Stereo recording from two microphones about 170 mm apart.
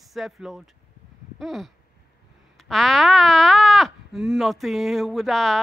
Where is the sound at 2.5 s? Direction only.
Centre (ahead or behind).